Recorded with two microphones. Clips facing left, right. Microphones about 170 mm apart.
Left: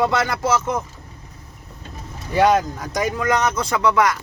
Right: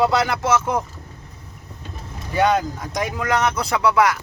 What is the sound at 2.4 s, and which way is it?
Speech, centre (ahead or behind).